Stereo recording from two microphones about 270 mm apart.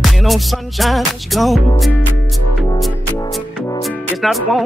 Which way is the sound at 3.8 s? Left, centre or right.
Centre.